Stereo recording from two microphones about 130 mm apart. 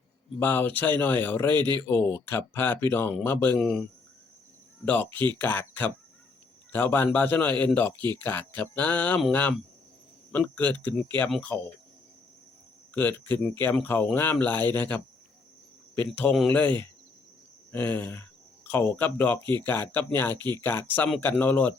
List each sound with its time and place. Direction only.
0.3 s a man's voice: 15° left (ahead or behind)
1.5 s speech: 35° right (ahead or behind)
1.9 s a man's voice: 15° left (ahead or behind)
3.6 s speech: 5° left (ahead or behind)
4.9 s a man's voice: 15° left (ahead or behind)
12.9 s a man's voice: 15° left (ahead or behind)
19.4 s speech: 35° right (ahead or behind)
19.6 s a man's voice: 15° left (ahead or behind)